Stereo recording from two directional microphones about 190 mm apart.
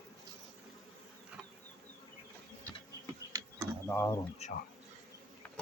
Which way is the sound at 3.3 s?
20° right (ahead or behind).